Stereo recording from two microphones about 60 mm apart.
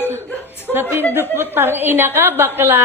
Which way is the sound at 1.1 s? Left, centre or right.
Right.